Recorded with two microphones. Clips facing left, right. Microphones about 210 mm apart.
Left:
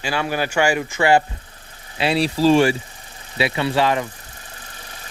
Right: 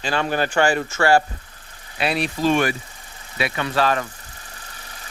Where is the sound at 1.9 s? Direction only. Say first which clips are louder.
Left 4 dB; 25° left (ahead or behind).